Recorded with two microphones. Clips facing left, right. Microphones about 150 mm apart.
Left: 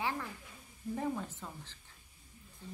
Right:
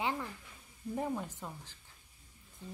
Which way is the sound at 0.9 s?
10° right (ahead or behind).